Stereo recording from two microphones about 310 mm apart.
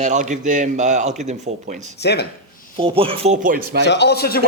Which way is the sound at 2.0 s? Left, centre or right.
Left.